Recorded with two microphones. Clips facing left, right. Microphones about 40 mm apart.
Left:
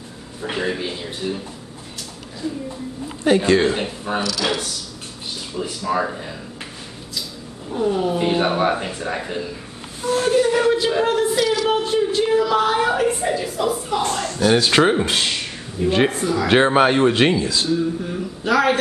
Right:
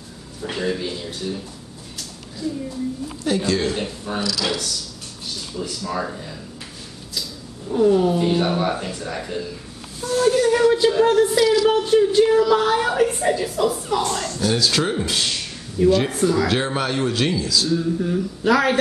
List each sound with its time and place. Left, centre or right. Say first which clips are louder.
0.4 s speech: left 1 dB; left
2.4 s speech: even; centre
3.3 s speech: left 6 dB; left
7.7 s a woman's voice: right 4 dB; centre
8.2 s a woman's voice: left 1 dB; left
11.8 s a woman's voice: right 4 dB; centre
14.2 s speech: left 4 dB; left
16.1 s a woman's voice: right 2 dB; centre
16.4 s speech: left 7 dB; left
17.6 s a woman's voice: even; centre